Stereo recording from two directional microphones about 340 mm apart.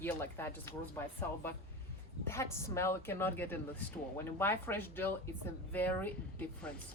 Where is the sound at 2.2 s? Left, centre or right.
Centre.